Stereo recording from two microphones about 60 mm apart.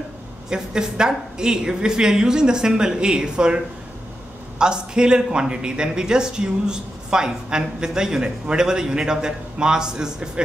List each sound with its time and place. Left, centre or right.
0.5 s speech: centre